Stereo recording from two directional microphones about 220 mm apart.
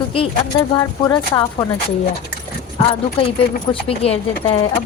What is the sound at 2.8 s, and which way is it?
Speech, 25° left (ahead or behind).